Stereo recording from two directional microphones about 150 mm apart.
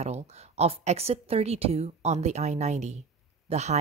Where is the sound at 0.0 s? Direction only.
45° right (ahead or behind).